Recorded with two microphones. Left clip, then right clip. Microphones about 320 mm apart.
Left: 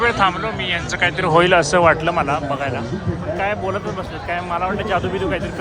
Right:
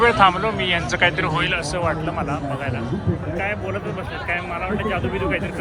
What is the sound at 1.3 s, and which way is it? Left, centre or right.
Speech, left.